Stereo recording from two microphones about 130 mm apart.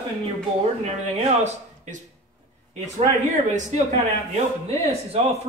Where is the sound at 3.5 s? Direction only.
65° right (ahead or behind).